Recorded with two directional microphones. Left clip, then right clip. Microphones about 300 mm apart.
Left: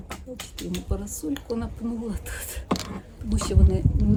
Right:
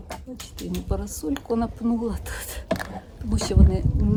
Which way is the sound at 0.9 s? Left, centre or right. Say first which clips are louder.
Right 5 dB; centre.